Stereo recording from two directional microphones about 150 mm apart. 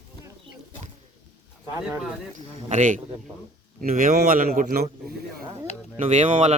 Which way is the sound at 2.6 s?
55° right (ahead or behind).